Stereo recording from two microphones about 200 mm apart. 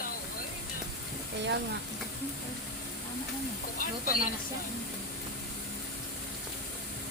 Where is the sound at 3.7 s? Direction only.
45° left (ahead or behind).